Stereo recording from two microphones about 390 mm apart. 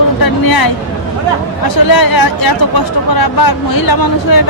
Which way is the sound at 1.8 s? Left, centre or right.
Left.